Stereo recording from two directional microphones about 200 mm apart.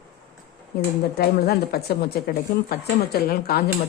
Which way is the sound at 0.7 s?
50° left (ahead or behind).